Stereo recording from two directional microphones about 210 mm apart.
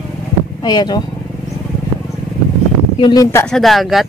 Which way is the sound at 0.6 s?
20° left (ahead or behind).